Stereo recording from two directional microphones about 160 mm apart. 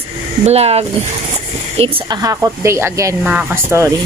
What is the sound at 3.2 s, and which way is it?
Speech, 5° right (ahead or behind).